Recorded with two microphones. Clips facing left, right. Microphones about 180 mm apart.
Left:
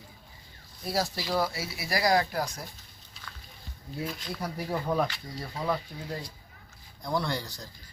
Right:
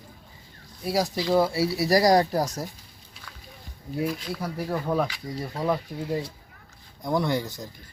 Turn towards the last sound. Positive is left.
turn(degrees=-20)  # may be behind; listen again after turning